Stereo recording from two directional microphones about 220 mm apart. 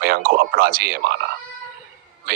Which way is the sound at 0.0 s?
45° right (ahead or behind).